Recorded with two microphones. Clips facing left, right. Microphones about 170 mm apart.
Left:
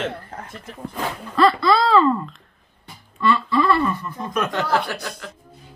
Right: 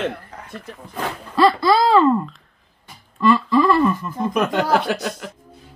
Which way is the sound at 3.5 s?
5° right (ahead or behind).